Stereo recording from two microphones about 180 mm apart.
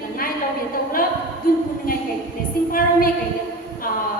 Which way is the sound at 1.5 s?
55° left (ahead or behind).